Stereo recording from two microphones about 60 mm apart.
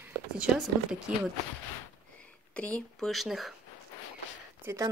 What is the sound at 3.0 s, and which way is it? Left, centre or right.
Speech, centre.